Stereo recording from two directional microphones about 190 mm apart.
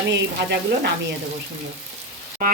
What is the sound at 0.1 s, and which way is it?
Speech, 65° right (ahead or behind).